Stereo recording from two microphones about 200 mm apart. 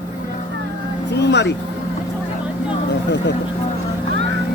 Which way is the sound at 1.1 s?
60° left (ahead or behind).